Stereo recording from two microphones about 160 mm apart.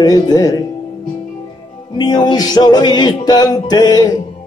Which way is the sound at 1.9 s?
25° left (ahead or behind).